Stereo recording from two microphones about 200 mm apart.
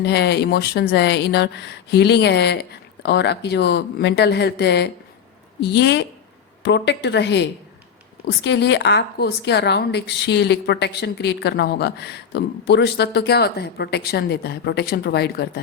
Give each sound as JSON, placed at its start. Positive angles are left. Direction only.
{"t": 0.0, "sound": "a woman's voice", "side_deg": 55}